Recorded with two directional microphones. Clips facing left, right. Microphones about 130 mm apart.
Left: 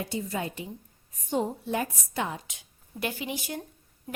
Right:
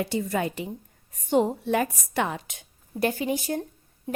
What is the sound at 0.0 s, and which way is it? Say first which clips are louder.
A woman's voice: right 5 dB; 70° right (ahead or behind).